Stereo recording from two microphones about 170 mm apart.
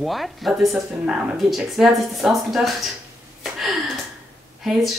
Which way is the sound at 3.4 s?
Centre (ahead or behind).